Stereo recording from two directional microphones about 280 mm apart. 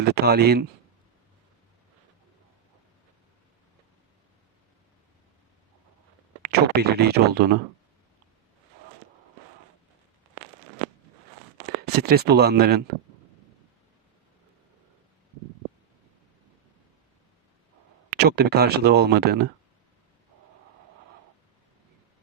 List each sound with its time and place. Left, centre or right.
0.0 s speech: right
6.4 s speech: right
11.9 s speech: right
18.1 s speech: right